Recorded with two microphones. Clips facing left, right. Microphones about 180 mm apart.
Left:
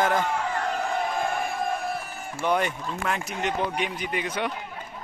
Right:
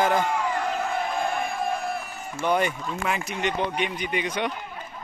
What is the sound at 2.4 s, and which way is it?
Speech, centre (ahead or behind).